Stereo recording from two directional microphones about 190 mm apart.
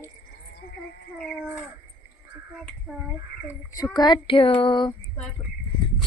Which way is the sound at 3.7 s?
20° left (ahead or behind).